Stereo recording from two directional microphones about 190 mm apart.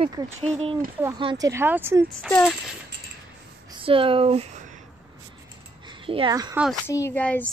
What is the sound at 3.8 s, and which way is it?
Speech, 30° right (ahead or behind).